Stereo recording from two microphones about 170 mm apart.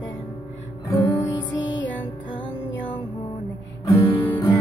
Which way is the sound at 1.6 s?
90° left.